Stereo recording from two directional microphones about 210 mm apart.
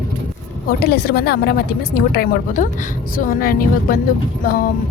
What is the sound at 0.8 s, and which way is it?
Speech, 45° left (ahead or behind).